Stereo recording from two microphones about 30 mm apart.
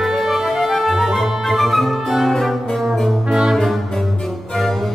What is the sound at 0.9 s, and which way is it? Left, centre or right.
Music, centre.